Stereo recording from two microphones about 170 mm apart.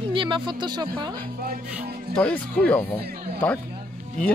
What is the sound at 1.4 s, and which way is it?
Music, 60° right (ahead or behind).